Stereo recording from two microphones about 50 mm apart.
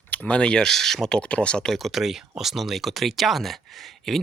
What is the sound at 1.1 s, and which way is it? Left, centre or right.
Speech, left.